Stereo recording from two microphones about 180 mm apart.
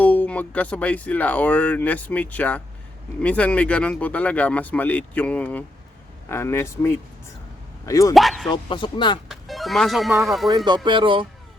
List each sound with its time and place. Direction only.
0.0 s speech: 10° left (ahead or behind)
8.1 s speech: centre (ahead or behind)
8.5 s speech: 25° left (ahead or behind)
9.3 s speech: centre (ahead or behind)
10.8 s speech: 30° right (ahead or behind)